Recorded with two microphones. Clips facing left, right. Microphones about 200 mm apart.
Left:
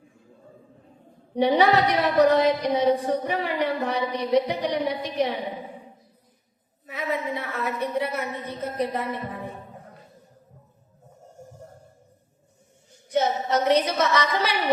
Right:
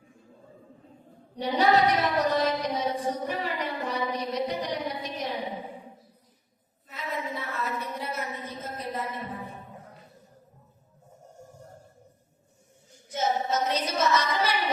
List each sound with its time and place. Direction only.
1.4 s a sound: 65° left (ahead or behind)
6.8 s a woman's voice: 60° left (ahead or behind)
13.1 s a woman's voice: 65° left (ahead or behind)